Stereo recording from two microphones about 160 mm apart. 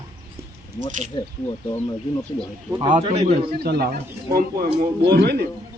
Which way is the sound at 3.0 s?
45° right (ahead or behind).